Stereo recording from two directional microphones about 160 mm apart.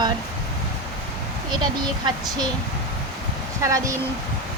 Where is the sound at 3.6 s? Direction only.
20° right (ahead or behind).